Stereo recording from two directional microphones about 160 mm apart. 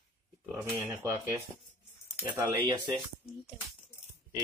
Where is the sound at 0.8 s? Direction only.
15° right (ahead or behind).